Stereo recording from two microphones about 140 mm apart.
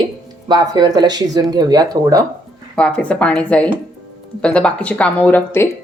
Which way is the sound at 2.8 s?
5° left (ahead or behind).